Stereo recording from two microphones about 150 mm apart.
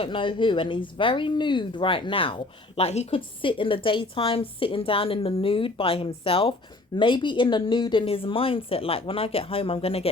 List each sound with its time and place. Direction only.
0.0 s speech: 35° left (ahead or behind)